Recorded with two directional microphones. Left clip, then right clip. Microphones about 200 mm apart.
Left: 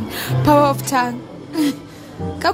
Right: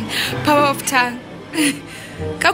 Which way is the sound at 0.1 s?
30° left (ahead or behind).